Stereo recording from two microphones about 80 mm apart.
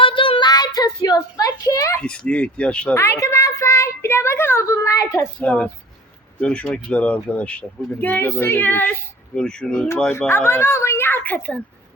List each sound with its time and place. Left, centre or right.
0.0 s child singing: left
2.0 s speech: centre
2.9 s a woman's voice: left
5.4 s speech: centre
8.0 s speech: left
9.3 s speech: centre
10.1 s speech: left